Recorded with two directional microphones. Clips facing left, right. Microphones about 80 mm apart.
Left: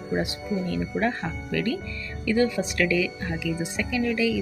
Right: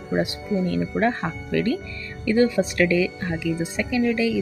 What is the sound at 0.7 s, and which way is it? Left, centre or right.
Speech, right.